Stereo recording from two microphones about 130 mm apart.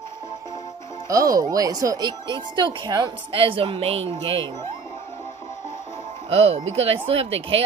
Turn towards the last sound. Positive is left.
turn(degrees=-45)  # may be behind; listen again after turning